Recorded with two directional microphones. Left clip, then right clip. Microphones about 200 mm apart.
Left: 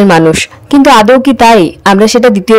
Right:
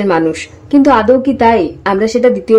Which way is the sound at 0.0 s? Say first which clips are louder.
Left 7 dB; 35° left (ahead or behind).